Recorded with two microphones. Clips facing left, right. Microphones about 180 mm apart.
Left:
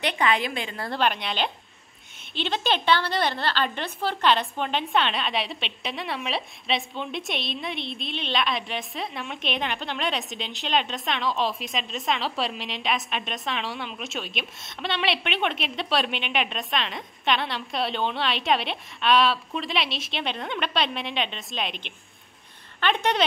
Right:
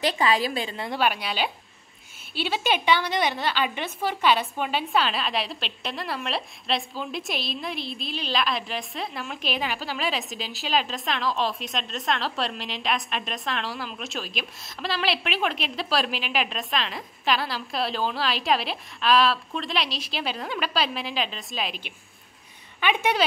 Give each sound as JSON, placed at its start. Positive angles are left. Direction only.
{"t": 0.0, "sound": "a woman's voice", "side_deg": -35}
{"t": 0.7, "sound": "a woman's voice", "side_deg": -10}